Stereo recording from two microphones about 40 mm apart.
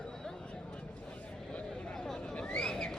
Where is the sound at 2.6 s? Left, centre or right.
Centre.